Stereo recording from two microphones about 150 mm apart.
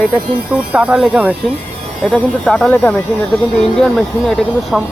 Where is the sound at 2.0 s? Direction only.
5° left (ahead or behind).